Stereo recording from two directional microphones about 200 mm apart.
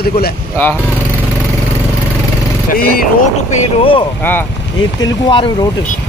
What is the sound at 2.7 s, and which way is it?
Speech, 45° left (ahead or behind).